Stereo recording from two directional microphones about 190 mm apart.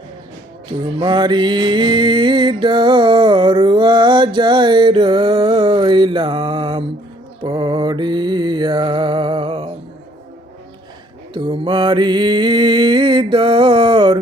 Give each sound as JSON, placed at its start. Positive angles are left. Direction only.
{"t": 0.9, "sound": "music", "side_deg": -25}
{"t": 7.4, "sound": "mantra", "side_deg": -25}
{"t": 11.3, "sound": "mantra", "side_deg": -25}